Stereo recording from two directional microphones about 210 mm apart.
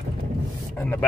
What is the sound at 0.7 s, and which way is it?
Speech, 10° left (ahead or behind).